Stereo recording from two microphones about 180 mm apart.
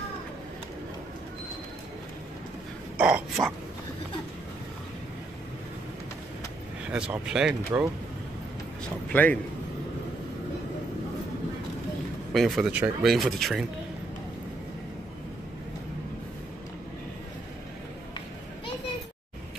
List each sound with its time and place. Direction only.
3.0 s speech: 5° right (ahead or behind)
6.9 s speech: 5° right (ahead or behind)
9.1 s a man's voice: 10° left (ahead or behind)
12.3 s speech: centre (ahead or behind)